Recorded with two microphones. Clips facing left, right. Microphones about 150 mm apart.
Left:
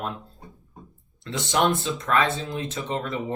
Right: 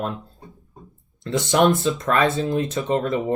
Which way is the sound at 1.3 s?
45° right (ahead or behind).